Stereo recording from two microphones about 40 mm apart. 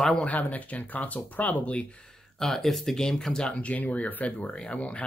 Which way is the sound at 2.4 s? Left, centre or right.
Centre.